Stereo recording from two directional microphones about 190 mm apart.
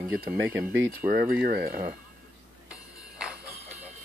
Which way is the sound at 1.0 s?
50° right (ahead or behind).